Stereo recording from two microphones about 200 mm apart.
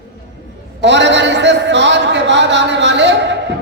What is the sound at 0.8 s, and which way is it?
A man's voice, 60° right (ahead or behind).